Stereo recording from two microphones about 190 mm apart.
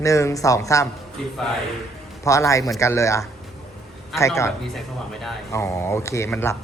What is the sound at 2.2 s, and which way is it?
A woman's voice, 15° left (ahead or behind).